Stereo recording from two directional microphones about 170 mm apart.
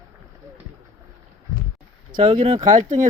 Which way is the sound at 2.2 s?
40° right (ahead or behind).